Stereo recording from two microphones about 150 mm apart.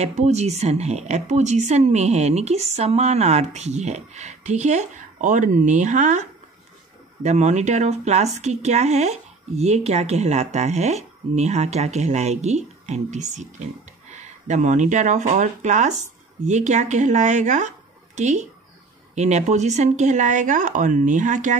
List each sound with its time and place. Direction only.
0.0 s speech: 50° right (ahead or behind)
7.2 s speech: 50° right (ahead or behind)